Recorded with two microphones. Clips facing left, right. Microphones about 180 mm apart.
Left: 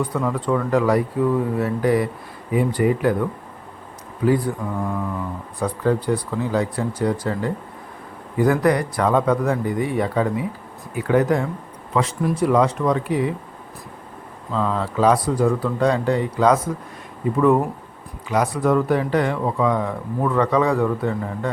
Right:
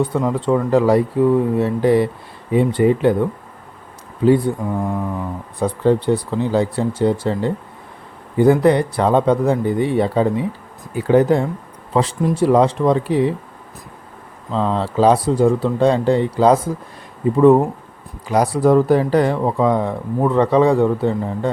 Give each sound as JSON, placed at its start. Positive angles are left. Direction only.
{"t": 0.0, "sound": "speech", "side_deg": -25}
{"t": 4.3, "sound": "speech", "side_deg": -25}
{"t": 14.5, "sound": "speech", "side_deg": -30}